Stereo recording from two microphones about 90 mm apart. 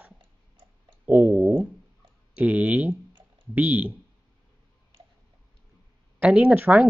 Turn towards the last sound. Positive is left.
turn(degrees=-20)  # may be behind; listen again after turning